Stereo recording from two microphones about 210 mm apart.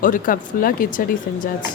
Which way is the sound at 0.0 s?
40° left (ahead or behind).